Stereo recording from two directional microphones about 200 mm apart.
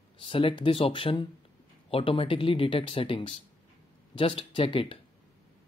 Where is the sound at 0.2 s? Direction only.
25° left (ahead or behind).